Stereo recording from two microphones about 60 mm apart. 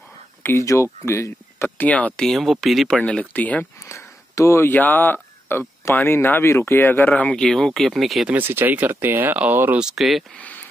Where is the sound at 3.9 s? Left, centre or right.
Left.